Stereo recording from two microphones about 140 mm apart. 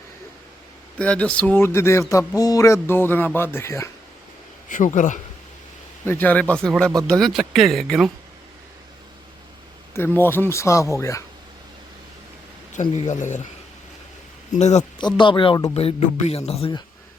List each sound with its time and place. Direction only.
0.9 s speech: 10° left (ahead or behind)
4.7 s a man's voice: 65° left (ahead or behind)
6.1 s speech: 15° left (ahead or behind)
9.9 s speech: 15° left (ahead or behind)
12.7 s a man's voice: 60° left (ahead or behind)
14.5 s a man's voice: 55° left (ahead or behind)
14.9 s speech: 35° left (ahead or behind)
15.7 s a man's voice: 45° left (ahead or behind)